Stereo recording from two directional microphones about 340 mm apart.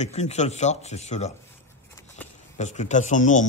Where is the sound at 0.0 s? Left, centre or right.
Centre.